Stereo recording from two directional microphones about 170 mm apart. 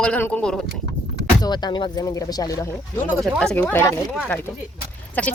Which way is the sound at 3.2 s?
5° left (ahead or behind).